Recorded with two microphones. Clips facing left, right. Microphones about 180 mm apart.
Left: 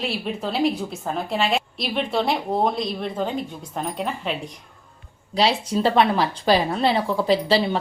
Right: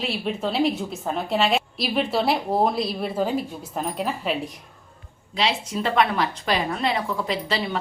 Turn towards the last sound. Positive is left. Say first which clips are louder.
# left 7 dB
turn(degrees=30)  # may be behind; listen again after turning